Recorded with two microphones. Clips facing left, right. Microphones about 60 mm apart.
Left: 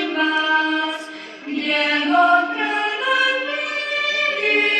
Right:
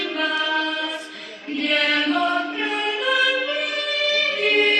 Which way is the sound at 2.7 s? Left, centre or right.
Left.